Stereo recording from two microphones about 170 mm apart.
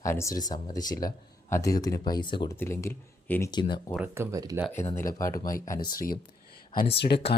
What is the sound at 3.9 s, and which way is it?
Speech, 10° right (ahead or behind).